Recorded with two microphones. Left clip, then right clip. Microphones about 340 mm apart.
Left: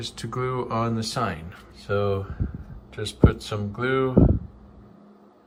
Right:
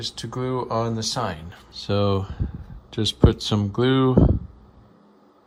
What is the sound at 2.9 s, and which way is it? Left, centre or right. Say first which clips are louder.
Speech: right 3 dB; centre.